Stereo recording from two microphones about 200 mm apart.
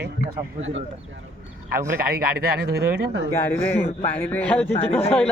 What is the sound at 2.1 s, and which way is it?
Speech, 50° right (ahead or behind).